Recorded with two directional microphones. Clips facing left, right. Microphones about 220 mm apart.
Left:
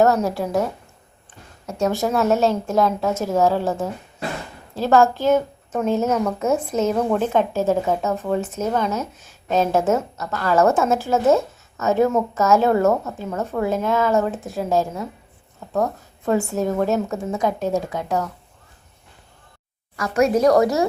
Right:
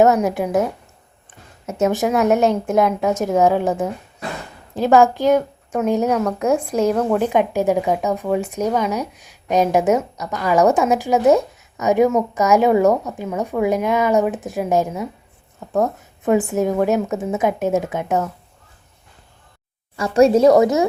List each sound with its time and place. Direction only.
0.0 s speech: 15° right (ahead or behind)
16.2 s a woman's voice: 15° right (ahead or behind)
20.0 s a woman's voice: 30° right (ahead or behind)